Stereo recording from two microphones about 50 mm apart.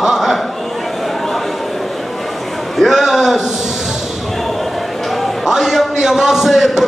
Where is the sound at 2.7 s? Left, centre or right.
Centre.